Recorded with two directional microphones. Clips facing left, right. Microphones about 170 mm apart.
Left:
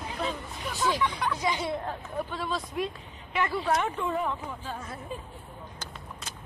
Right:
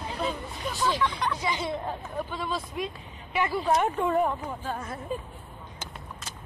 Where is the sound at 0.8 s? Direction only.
10° left (ahead or behind).